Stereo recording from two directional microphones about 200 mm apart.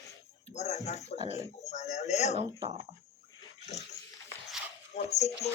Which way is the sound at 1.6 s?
35° left (ahead or behind).